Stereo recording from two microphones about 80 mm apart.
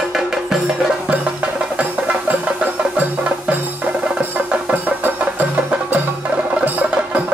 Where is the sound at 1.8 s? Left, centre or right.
Centre.